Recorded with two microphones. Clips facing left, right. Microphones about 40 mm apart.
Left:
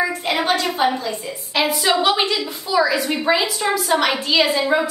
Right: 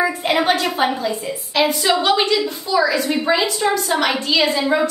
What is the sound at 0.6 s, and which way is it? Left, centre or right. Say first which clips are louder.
Speech: right 1 dB; right.